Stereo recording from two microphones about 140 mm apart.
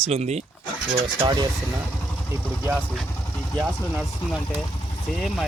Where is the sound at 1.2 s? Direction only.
30° right (ahead or behind).